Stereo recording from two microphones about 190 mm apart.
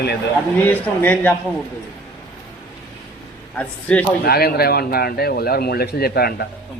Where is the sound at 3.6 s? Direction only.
5° left (ahead or behind).